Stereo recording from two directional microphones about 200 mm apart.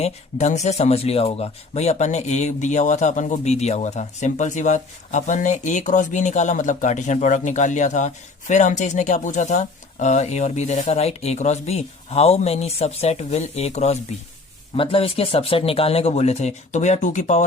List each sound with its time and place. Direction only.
0.0 s speech: 35° left (ahead or behind)